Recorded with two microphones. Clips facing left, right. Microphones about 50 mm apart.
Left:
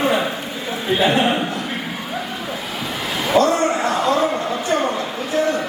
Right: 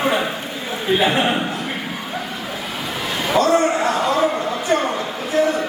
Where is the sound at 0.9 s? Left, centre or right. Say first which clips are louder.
Left 1 dB; centre.